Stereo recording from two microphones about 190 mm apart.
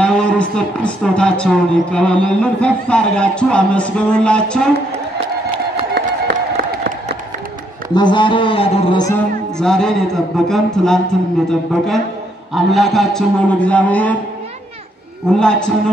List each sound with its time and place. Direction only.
0.0 s speech: 5° left (ahead or behind)
5.9 s music: 60° right (ahead or behind)
7.9 s a sound: 25° left (ahead or behind)
9.6 s a man's voice: 5° left (ahead or behind)
15.3 s speech: 5° left (ahead or behind)